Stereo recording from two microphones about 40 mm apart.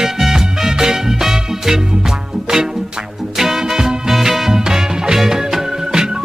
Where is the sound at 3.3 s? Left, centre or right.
Centre.